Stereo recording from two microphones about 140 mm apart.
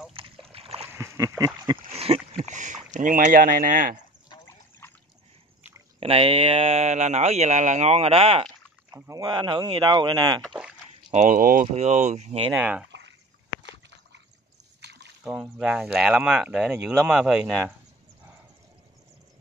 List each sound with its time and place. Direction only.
0.5 s splash: 45° right (ahead or behind)
0.9 s a sound: 20° right (ahead or behind)
1.9 s speech: 45° right (ahead or behind); by 4.0 s 70° right (ahead or behind)
4.5 s trickle: 15° left (ahead or behind)
5.9 s speech: 45° right (ahead or behind)
8.9 s speech: 25° right (ahead or behind)
10.4 s a sound: 5° right (ahead or behind)
11.1 s speech: 70° right (ahead or behind); by 12.4 s 50° right (ahead or behind)
12.4 s speech: 10° right (ahead or behind)
15.2 s speech: 5° right (ahead or behind)